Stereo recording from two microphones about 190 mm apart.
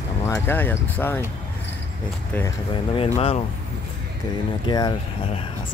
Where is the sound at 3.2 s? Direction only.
30° left (ahead or behind).